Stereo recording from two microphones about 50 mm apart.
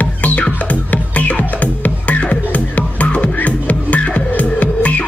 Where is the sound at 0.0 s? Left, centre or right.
Left.